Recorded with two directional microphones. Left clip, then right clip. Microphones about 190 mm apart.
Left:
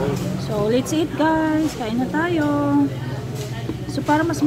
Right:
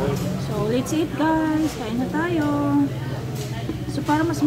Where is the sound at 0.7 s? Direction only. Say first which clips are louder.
Left 1 dB; 40° left (ahead or behind).